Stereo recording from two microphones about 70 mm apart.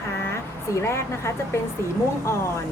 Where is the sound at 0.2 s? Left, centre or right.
Left.